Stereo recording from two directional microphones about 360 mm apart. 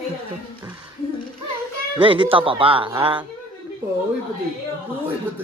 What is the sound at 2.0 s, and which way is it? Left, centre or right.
Speech, centre.